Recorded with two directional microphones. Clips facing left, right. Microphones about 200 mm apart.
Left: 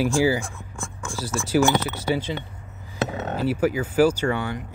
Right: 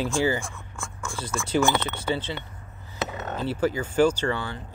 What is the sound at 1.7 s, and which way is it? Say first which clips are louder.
Speech: left 3 dB; 10° left (ahead or behind).